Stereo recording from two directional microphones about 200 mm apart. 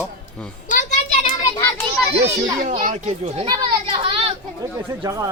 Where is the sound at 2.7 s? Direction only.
35° right (ahead or behind).